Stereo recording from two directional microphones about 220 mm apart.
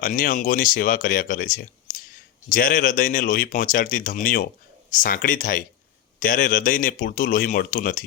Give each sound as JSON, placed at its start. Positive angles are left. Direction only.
{"t": 0.0, "sound": "speech", "side_deg": 40}